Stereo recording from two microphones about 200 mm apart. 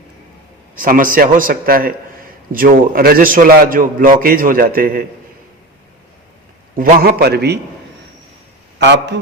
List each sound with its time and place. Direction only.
0.8 s a man's voice: 45° right (ahead or behind)
6.7 s a man's voice: 45° right (ahead or behind)
8.8 s a man's voice: 60° right (ahead or behind)